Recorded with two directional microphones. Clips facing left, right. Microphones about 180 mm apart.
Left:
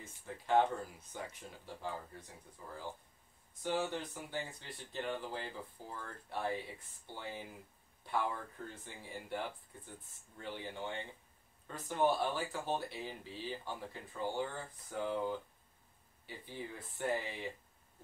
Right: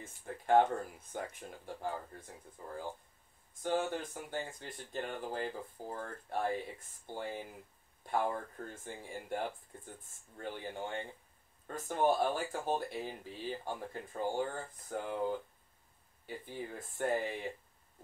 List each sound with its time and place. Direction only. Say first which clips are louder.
0.0 s speech: right 4 dB; 50° right (ahead or behind)
3.6 s speech: right 2 dB; 50° right (ahead or behind)
16.3 s speech: right 3 dB; 50° right (ahead or behind)